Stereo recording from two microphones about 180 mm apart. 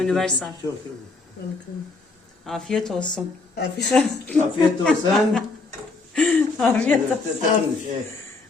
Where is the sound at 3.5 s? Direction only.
70° left (ahead or behind).